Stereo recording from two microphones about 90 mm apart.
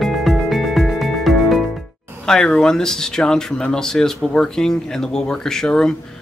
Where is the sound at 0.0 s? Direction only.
Centre (ahead or behind).